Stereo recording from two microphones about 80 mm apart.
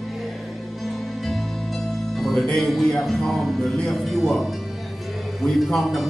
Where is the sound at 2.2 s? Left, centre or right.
Centre.